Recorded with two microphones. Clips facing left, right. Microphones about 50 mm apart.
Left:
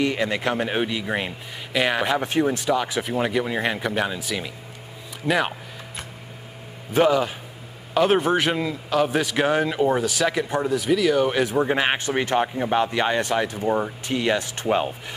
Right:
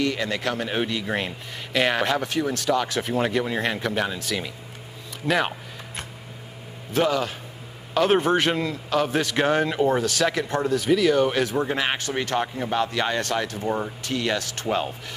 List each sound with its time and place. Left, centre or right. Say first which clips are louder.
0.0 s a man's voice: left 2 dB; left; by 2.1 s centre
2.1 s a man's voice: left 3 dB; left; by 5.5 s centre
6.9 s a man's voice: left 4 dB; centre